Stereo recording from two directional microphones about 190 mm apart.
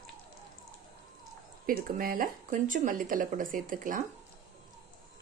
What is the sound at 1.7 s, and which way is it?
Speech, 50° right (ahead or behind).